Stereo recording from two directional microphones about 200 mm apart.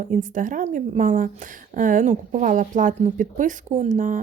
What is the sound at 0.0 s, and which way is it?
Speech, 40° right (ahead or behind).